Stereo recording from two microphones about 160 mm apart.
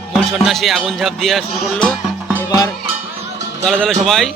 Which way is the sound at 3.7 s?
5° left (ahead or behind).